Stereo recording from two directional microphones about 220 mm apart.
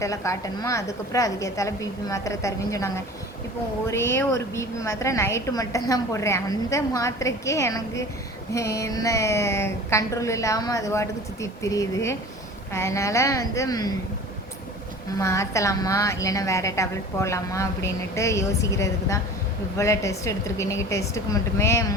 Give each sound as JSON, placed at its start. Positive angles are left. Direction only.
{"t": 0.0, "sound": "a woman's voice", "side_deg": 15}
{"t": 15.2, "sound": "a woman's voice", "side_deg": 15}